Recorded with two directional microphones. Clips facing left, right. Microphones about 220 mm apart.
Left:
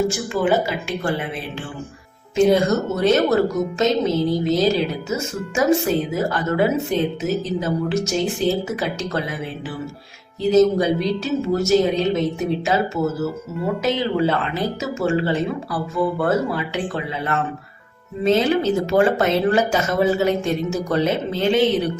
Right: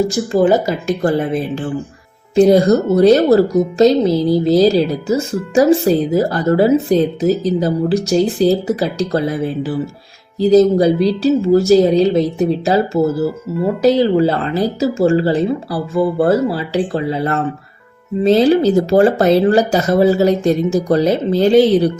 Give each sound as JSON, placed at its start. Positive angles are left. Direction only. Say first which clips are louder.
{"t": 0.1, "sound": "speech", "louder": "right 7 dB", "side_deg": -40}